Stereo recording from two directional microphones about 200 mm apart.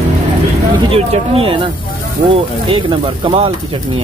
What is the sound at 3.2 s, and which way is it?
Speech, 30° right (ahead or behind).